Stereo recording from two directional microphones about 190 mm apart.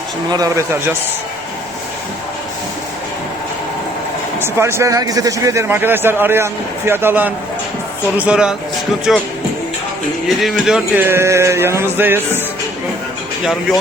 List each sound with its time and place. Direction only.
0.3 s a man's voice: 20° right (ahead or behind)
4.4 s a man's voice: 15° right (ahead or behind)
10.2 s a man's voice: centre (ahead or behind)